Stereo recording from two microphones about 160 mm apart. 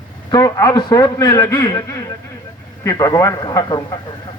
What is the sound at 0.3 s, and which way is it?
A man's voice, 25° left (ahead or behind).